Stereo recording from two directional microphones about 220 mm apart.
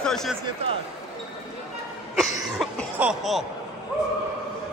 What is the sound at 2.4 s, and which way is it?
Cough, 5° right (ahead or behind).